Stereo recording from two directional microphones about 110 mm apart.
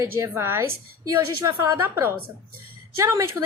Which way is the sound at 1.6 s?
25° right (ahead or behind).